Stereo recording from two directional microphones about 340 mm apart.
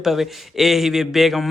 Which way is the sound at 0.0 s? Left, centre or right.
Centre.